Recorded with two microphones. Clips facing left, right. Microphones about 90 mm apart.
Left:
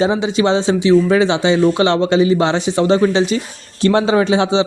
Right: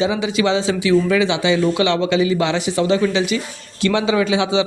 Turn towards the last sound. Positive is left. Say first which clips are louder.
# left 3 dB
turn(degrees=35)  # may be behind; listen again after turning